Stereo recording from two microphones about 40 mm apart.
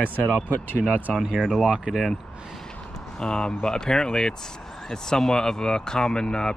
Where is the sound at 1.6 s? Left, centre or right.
Centre.